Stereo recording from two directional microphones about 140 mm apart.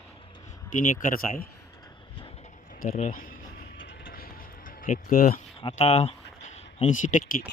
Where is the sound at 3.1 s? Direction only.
90° left.